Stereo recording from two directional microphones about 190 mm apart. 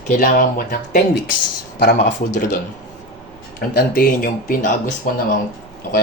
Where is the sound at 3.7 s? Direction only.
50° left (ahead or behind).